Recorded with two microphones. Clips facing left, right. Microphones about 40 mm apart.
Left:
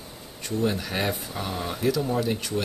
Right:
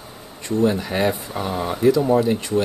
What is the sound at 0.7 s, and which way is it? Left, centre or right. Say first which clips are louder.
Speech: right 6 dB; centre.